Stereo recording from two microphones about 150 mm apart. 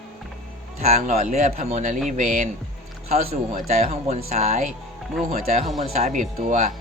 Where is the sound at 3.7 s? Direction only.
45° right (ahead or behind).